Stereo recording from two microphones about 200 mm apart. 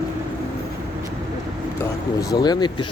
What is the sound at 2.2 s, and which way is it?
Speech, 20° left (ahead or behind).